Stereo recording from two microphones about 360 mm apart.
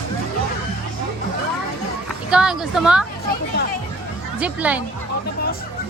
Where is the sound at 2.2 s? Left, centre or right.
Centre.